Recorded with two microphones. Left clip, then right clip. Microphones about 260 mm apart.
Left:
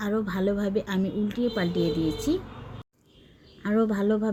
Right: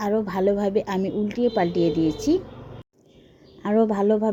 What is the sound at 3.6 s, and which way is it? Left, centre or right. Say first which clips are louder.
Speech: right 5 dB; centre.